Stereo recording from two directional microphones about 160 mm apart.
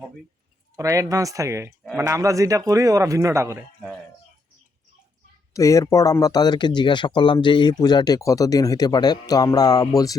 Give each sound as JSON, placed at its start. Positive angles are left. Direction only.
{"t": 0.8, "sound": "a man's voice", "side_deg": -20}
{"t": 5.5, "sound": "speech", "side_deg": 20}